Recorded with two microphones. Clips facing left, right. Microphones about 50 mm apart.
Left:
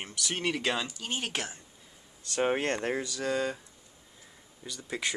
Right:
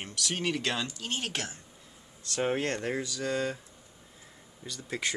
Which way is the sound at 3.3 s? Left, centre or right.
Centre.